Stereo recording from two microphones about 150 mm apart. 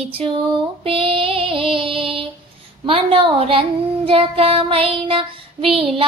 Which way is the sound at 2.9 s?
35° right (ahead or behind).